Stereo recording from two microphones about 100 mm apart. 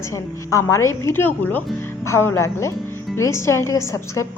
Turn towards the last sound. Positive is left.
turn(degrees=30)  # may be behind; listen again after turning